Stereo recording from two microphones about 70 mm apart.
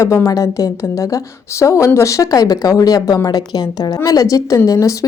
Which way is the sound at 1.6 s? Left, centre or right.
Left.